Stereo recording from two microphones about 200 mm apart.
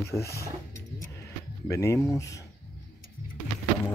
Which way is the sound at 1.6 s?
15° left (ahead or behind).